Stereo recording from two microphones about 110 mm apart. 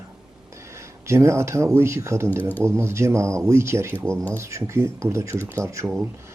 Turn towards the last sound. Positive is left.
turn(degrees=-30)  # may be behind; listen again after turning